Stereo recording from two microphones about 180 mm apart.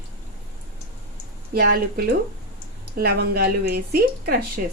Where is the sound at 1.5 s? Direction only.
60° right (ahead or behind).